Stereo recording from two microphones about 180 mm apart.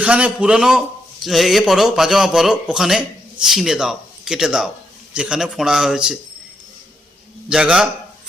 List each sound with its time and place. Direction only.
0.0 s a man's voice: 5° right (ahead or behind)
7.5 s a man's voice: 5° right (ahead or behind)